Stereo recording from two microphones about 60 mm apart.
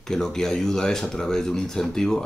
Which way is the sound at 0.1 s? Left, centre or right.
Centre.